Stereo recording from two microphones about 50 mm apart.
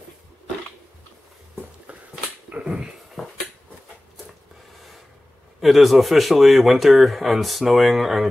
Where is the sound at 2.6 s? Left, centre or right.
Right.